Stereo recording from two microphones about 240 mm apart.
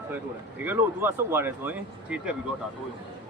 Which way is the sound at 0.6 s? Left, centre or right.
Centre.